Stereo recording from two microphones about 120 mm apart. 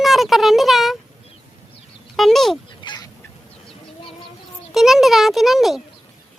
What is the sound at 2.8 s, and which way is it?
Fowl, 40° left (ahead or behind).